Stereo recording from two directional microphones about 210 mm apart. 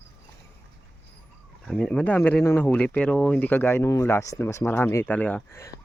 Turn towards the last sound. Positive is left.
turn(degrees=10)  # may be behind; listen again after turning